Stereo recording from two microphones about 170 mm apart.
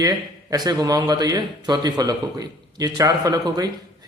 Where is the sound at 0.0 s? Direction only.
25° right (ahead or behind).